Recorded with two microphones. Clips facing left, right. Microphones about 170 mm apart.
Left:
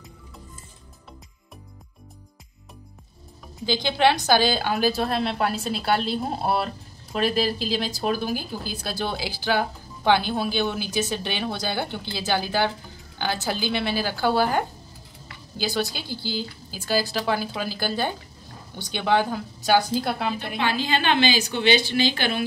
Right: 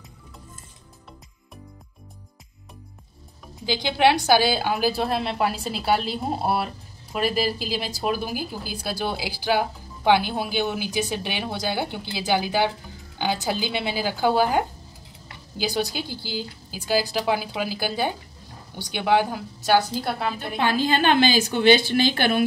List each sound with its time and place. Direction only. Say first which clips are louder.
3.6 s a woman's voice: right 1 dB; 10° right (ahead or behind)
20.3 s a woman's voice: right 2 dB; 45° right (ahead or behind)